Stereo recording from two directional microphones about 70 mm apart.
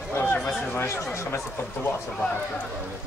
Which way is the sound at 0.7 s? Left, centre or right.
Left.